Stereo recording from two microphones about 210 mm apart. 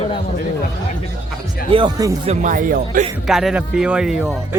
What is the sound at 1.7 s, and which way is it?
Speech, 20° right (ahead or behind).